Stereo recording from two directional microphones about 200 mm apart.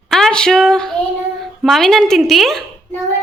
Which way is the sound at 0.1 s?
5° left (ahead or behind).